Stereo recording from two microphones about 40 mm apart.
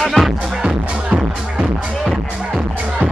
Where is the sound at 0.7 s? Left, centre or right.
Right.